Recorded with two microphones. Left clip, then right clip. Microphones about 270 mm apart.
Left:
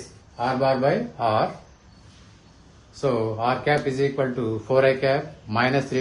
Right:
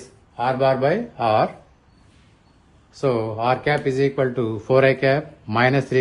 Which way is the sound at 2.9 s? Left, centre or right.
Right.